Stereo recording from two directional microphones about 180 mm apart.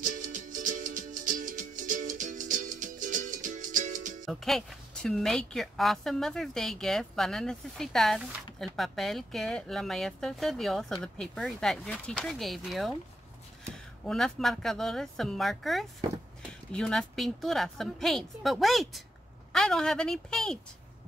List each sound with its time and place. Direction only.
0.0 s music: 45° right (ahead or behind)
4.3 s a woman's voice: centre (ahead or behind)
14.0 s a woman's voice: centre (ahead or behind)